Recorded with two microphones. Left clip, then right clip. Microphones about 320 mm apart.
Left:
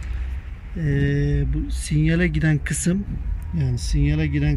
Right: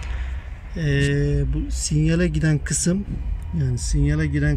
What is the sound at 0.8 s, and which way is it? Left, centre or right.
Speech, centre.